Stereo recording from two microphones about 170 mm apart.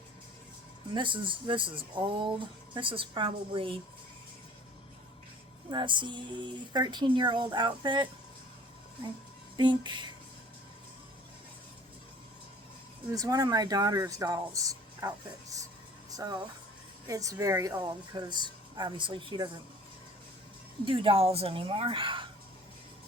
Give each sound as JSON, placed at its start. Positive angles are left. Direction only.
{"t": 0.9, "sound": "a woman's voice", "side_deg": -30}
{"t": 5.7, "sound": "a woman's voice", "side_deg": -30}
{"t": 9.6, "sound": "a woman's voice", "side_deg": -25}
{"t": 13.1, "sound": "a woman's voice", "side_deg": -20}
{"t": 20.8, "sound": "a woman's voice", "side_deg": -30}